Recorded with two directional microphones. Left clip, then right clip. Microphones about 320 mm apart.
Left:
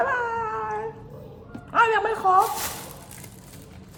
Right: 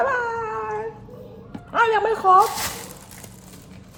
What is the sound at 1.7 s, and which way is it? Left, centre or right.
Speech, centre.